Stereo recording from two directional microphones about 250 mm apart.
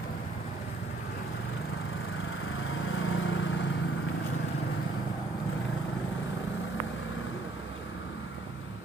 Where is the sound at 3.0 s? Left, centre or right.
Left.